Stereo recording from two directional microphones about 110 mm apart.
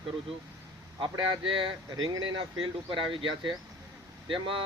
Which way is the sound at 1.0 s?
55° right (ahead or behind).